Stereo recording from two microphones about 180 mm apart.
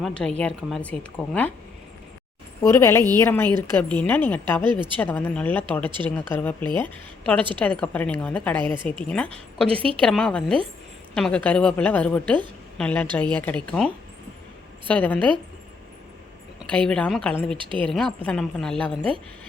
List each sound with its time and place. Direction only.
0.0 s a woman's voice: 5° left (ahead or behind)
2.6 s a woman's voice: 15° left (ahead or behind)
4.6 s a woman's voice: 25° right (ahead or behind)
4.9 s a woman's voice: 10° left (ahead or behind)
9.6 s a woman's voice: 30° right (ahead or behind)
10.0 s a woman's voice: 5° left (ahead or behind)
16.7 s a woman's voice: 5° left (ahead or behind)
17.6 s a woman's voice: 30° right (ahead or behind)
17.8 s a woman's voice: 5° left (ahead or behind)